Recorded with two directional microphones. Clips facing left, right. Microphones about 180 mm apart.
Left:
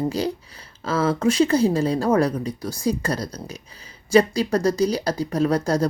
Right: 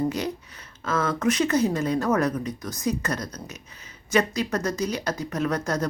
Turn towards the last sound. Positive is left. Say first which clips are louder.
# left 5 dB
turn(degrees=30)  # may be behind; listen again after turning